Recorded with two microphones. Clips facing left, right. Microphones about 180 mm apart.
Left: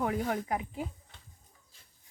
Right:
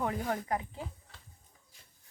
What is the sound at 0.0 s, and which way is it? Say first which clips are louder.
Speech: left 2 dB; 5° left (ahead or behind).